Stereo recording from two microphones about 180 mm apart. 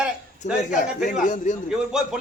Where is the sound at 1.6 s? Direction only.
5° right (ahead or behind).